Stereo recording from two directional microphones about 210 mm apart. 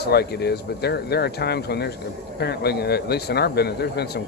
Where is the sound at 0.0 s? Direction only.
50° left (ahead or behind).